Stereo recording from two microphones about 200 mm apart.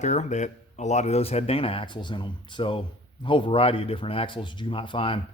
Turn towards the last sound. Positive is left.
turn(degrees=25)  # may be behind; listen again after turning